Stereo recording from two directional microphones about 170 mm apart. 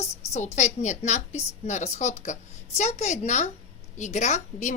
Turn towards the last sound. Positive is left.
turn(degrees=45)  # may be behind; listen again after turning